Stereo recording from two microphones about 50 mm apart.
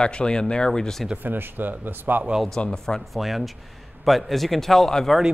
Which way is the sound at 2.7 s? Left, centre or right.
Centre.